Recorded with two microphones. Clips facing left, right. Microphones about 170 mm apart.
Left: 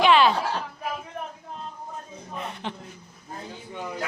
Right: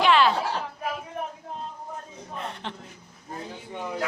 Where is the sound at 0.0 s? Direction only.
15° left (ahead or behind).